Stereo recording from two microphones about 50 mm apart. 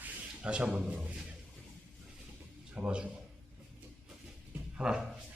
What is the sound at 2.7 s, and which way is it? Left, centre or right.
Speech, right.